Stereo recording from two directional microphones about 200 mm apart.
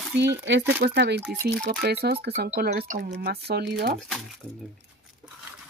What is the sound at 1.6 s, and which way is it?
Speech, 55° right (ahead or behind).